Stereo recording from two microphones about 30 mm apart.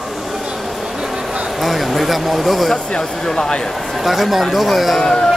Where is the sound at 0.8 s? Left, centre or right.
Centre.